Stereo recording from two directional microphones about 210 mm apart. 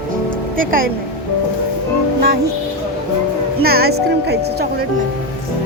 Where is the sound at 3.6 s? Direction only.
45° right (ahead or behind).